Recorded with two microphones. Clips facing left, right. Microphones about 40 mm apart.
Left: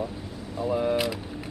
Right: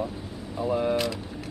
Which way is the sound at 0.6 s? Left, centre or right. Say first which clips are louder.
Even; centre.